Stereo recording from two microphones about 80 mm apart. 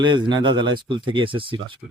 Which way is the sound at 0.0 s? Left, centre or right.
Right.